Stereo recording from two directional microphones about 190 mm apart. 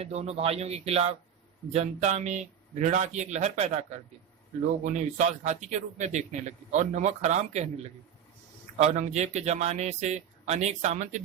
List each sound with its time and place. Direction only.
0.0 s speech: 35° right (ahead or behind)
8.8 s speech: 35° right (ahead or behind)